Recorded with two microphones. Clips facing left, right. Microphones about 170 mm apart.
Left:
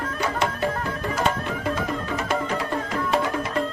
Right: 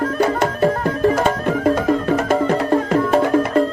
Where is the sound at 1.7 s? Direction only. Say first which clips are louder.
Right 11 dB; 35° right (ahead or behind).